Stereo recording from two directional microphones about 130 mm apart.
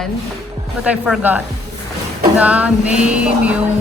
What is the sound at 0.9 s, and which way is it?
Speech, 10° right (ahead or behind).